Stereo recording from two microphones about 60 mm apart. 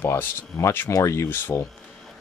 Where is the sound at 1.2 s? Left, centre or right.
Left.